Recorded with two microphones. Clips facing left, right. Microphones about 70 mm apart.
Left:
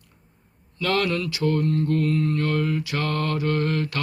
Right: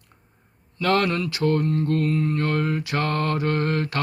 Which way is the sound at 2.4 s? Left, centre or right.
Right.